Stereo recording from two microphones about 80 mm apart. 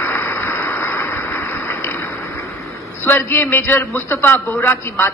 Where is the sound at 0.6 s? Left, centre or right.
Left.